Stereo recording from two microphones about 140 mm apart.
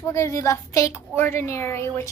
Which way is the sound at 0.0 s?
20° left (ahead or behind).